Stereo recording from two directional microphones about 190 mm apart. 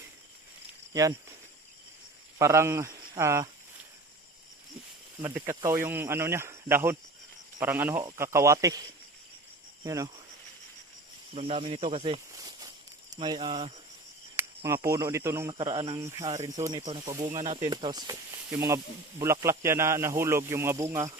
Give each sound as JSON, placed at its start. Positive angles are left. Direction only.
{"t": 2.4, "sound": "speech", "side_deg": -15}
{"t": 5.2, "sound": "speech", "side_deg": -15}
{"t": 9.8, "sound": "speech", "side_deg": -15}
{"t": 11.3, "sound": "speech", "side_deg": -30}
{"t": 14.3, "sound": "speech", "side_deg": -15}
{"t": 15.5, "sound": "speech", "side_deg": -25}
{"t": 16.0, "sound": "speech", "side_deg": -15}
{"t": 16.3, "sound": "speech", "side_deg": -35}
{"t": 17.1, "sound": "speech", "side_deg": -15}
{"t": 17.3, "sound": "speech", "side_deg": -40}
{"t": 17.7, "sound": "speech", "side_deg": -20}